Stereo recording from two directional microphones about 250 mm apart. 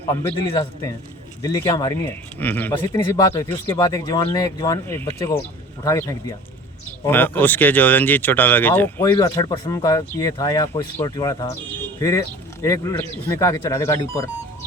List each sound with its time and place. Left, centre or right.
0.1 s speech: centre